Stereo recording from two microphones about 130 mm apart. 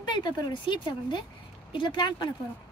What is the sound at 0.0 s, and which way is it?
Speech, 35° left (ahead or behind).